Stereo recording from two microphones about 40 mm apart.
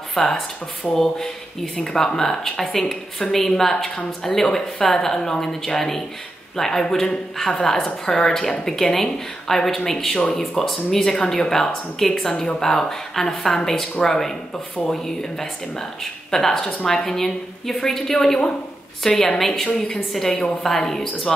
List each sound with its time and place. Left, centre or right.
0.1 s a woman's voice: centre